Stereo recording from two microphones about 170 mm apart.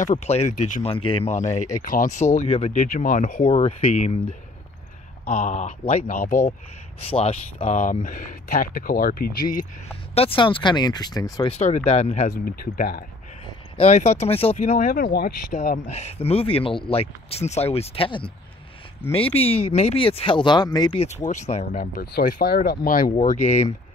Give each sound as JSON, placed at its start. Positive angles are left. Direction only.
{"t": 0.0, "sound": "speech", "side_deg": 45}
{"t": 0.8, "sound": "speech", "side_deg": 30}
{"t": 3.4, "sound": "speech", "side_deg": 35}
{"t": 5.2, "sound": "speech", "side_deg": 55}
{"t": 7.0, "sound": "speech", "side_deg": 35}
{"t": 7.6, "sound": "speech", "side_deg": 45}
{"t": 10.1, "sound": "speech", "side_deg": 30}
{"t": 11.4, "sound": "speech", "side_deg": 40}
{"t": 12.3, "sound": "speech", "side_deg": 60}
{"t": 13.5, "sound": "speech", "side_deg": 35}
{"t": 14.6, "sound": "speech", "side_deg": 55}
{"t": 15.5, "sound": "speech", "side_deg": 45}
{"t": 23.1, "sound": "speech", "side_deg": 40}